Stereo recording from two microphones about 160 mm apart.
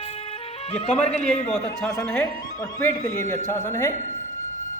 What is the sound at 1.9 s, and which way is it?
A woman's voice, 20° left (ahead or behind).